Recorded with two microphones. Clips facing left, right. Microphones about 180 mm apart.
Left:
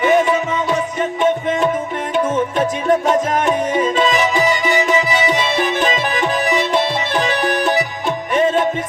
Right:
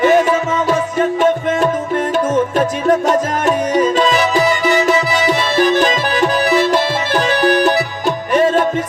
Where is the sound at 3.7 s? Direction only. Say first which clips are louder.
Right 3 dB; 40° right (ahead or behind).